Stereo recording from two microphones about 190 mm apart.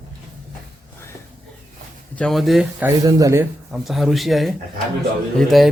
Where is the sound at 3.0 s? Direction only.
20° right (ahead or behind).